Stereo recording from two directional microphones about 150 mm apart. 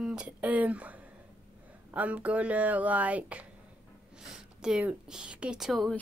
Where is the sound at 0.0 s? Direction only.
5° right (ahead or behind).